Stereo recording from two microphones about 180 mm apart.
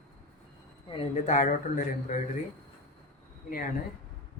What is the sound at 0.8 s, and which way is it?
Speech, 30° left (ahead or behind).